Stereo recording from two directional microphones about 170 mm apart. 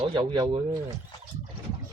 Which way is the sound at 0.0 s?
30° right (ahead or behind).